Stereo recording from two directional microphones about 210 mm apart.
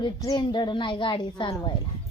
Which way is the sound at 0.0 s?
20° left (ahead or behind).